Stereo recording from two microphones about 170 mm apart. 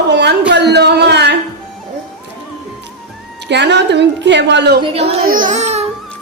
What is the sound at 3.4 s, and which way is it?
A woman's voice, 90° right.